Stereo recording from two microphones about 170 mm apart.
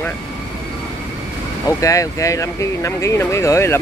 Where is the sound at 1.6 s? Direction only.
20° left (ahead or behind).